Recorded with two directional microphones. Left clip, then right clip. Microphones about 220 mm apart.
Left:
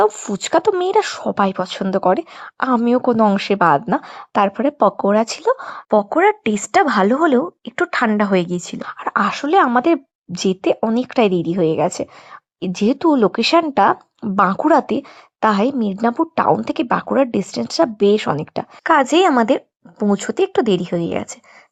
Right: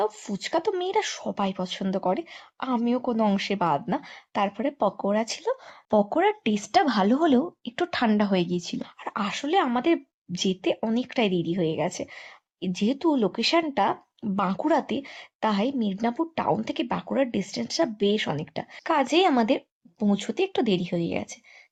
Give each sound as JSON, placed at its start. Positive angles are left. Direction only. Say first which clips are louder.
{"t": 0.0, "sound": "speech", "louder": "left 11 dB", "side_deg": 30}